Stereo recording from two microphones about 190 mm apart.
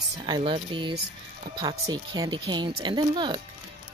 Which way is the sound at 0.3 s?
25° right (ahead or behind).